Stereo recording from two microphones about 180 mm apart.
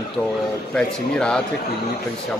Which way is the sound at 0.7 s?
5° left (ahead or behind).